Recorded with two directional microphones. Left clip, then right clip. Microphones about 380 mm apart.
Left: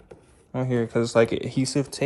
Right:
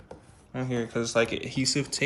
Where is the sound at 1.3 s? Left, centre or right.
Left.